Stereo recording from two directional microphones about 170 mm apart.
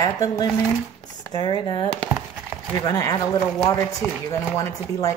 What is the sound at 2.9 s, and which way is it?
Speech, 20° left (ahead or behind).